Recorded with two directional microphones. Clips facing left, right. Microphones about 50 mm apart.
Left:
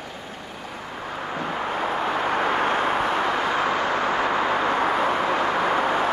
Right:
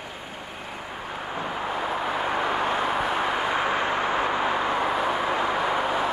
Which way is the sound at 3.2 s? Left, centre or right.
Centre.